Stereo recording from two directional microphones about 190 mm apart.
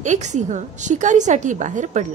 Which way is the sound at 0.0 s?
40° right (ahead or behind).